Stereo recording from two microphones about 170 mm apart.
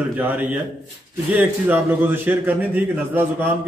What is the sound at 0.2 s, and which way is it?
A man's voice, 10° right (ahead or behind).